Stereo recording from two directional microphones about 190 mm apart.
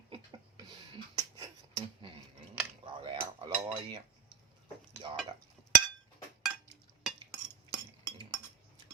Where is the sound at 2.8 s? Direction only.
25° right (ahead or behind).